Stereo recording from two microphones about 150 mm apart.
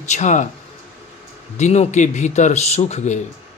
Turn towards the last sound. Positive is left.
turn(degrees=50)  # may be behind; listen again after turning